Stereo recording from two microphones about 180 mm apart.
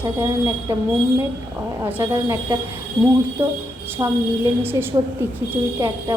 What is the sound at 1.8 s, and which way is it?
Speech, 10° right (ahead or behind).